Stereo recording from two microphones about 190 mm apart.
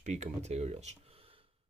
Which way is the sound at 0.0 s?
35° right (ahead or behind).